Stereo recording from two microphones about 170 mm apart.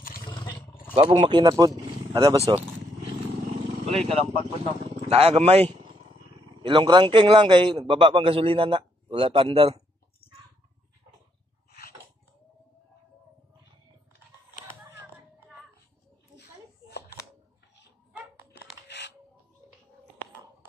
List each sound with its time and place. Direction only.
0.0 s roaring cats: 55° left (ahead or behind)
0.3 s roaring cats: 30° left (ahead or behind)
0.9 s speech: 30° right (ahead or behind)
3.8 s a man's voice: 35° right (ahead or behind)
10.2 s a sound: 35° left (ahead or behind)
18.3 s music: 75° left (ahead or behind)